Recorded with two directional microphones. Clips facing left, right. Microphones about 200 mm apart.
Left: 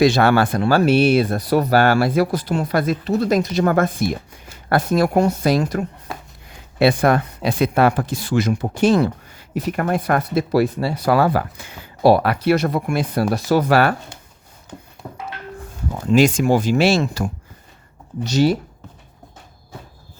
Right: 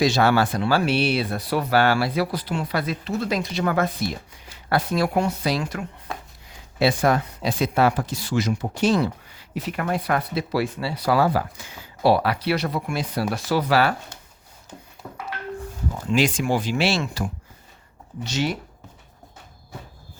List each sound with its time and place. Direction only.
0.0 s speech: 55° left (ahead or behind); by 5.8 s 40° left (ahead or behind)
6.1 s a sound: centre (ahead or behind)
6.5 s speech: 60° left (ahead or behind)
16.0 s speech: 45° left (ahead or behind)